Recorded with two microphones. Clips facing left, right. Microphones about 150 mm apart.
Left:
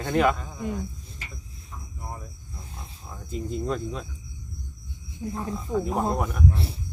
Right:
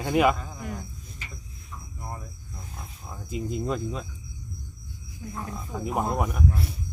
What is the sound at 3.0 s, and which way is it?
Speech, 10° right (ahead or behind).